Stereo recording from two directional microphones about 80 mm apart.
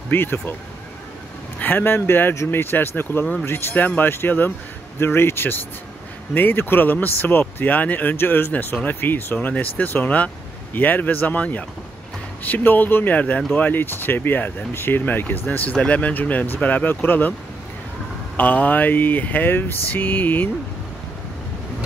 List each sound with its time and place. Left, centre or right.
0.1 s speech: left
1.6 s speech: left
18.3 s speech: centre